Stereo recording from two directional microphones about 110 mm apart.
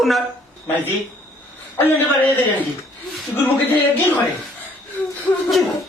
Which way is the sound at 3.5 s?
15° left (ahead or behind).